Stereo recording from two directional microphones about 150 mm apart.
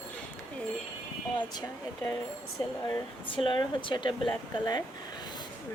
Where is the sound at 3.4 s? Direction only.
35° left (ahead or behind).